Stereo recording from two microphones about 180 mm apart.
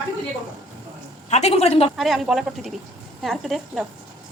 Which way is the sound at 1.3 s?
35° left (ahead or behind).